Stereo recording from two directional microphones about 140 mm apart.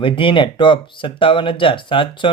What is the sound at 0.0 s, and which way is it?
Speech, 40° left (ahead or behind).